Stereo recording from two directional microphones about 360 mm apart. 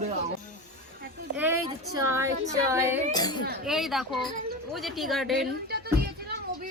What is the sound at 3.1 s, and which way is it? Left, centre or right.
Speech, centre.